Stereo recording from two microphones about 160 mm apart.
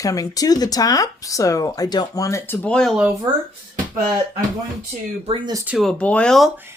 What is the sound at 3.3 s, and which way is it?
Speech, 25° right (ahead or behind).